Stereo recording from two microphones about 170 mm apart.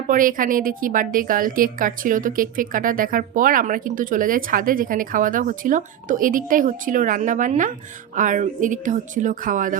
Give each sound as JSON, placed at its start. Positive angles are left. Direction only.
{"t": 0.1, "sound": "a woman's voice", "side_deg": -55}